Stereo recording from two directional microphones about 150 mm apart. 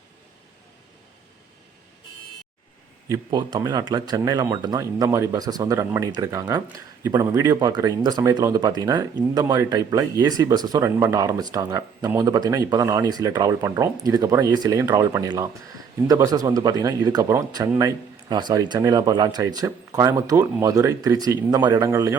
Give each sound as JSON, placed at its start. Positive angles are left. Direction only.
{"t": 3.1, "sound": "speech", "side_deg": -30}